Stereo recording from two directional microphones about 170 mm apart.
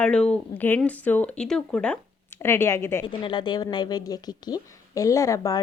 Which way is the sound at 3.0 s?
30° left (ahead or behind).